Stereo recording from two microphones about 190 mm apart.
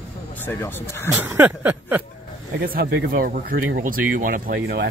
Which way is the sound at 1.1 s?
10° right (ahead or behind).